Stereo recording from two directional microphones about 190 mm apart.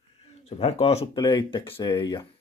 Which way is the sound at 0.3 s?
30° left (ahead or behind).